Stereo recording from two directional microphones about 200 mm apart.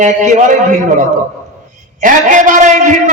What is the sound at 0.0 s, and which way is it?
Speech, 40° right (ahead or behind).